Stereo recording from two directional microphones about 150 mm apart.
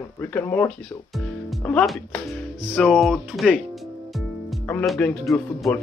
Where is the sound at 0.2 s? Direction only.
10° left (ahead or behind).